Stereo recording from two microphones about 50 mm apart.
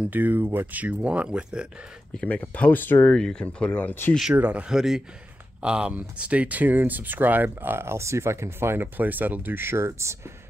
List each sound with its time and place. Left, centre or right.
0.1 s speech: right; by 1.7 s centre
2.2 s speech: left
3.2 s speech: centre
4.3 s speech: right
4.6 s speech: centre
5.6 s speech: right
7.7 s speech: right